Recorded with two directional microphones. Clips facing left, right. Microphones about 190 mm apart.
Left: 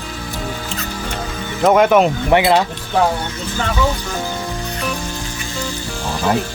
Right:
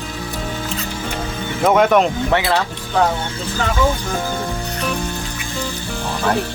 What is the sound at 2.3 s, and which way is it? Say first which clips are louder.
Speech: left 7 dB; 20° left (ahead or behind).